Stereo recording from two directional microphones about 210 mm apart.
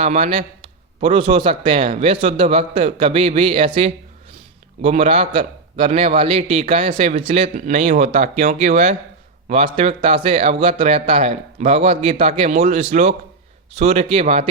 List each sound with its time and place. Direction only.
0.0 s a man's voice: 30° right (ahead or behind)